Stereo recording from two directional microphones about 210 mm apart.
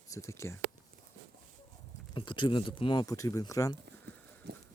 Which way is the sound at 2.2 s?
25° left (ahead or behind).